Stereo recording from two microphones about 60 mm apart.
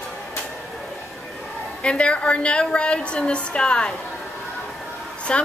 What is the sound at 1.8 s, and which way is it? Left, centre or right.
A woman's voice, centre.